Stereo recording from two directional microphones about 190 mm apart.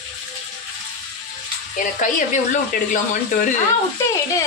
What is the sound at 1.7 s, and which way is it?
Speech, 40° left (ahead or behind).